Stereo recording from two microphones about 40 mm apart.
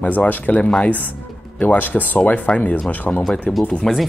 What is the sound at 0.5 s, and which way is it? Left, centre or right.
Speech, left.